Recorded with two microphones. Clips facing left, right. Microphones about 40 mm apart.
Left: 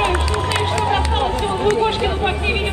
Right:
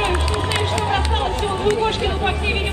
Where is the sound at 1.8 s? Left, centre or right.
Centre.